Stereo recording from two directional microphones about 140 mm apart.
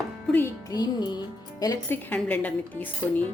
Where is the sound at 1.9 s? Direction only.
10° left (ahead or behind).